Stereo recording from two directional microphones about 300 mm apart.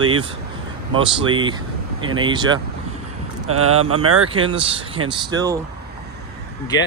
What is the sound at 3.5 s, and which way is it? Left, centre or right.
Speech, right.